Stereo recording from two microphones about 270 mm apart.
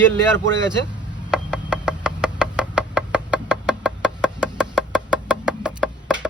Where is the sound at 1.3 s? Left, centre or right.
Centre.